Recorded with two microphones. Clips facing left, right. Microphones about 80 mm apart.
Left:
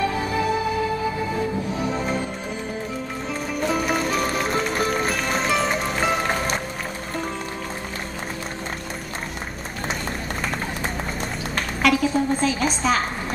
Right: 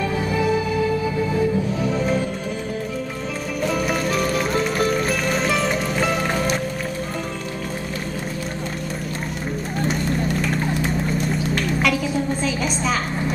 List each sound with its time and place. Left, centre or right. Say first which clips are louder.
2.0 s music: right 4 dB; centre
3.6 s music: right 1 dB; centre
10.0 s run: right 6 dB; left
11.1 s music: right 5 dB; left
11.8 s a sound: left 6 dB; centre